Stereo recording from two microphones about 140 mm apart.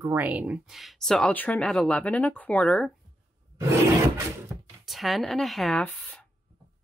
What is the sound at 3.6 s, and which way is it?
Roar, 20° right (ahead or behind).